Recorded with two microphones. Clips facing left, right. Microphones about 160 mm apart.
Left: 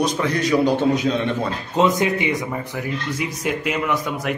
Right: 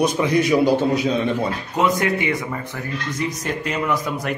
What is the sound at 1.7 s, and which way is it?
Speech, 20° left (ahead or behind).